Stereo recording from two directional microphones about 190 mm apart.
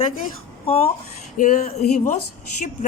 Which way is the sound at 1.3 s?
45° left (ahead or behind).